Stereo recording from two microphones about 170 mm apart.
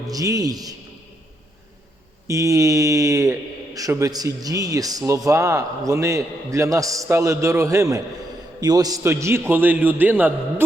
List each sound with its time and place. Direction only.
0.1 s speech: 20° right (ahead or behind)
2.2 s a man's voice: 20° right (ahead or behind)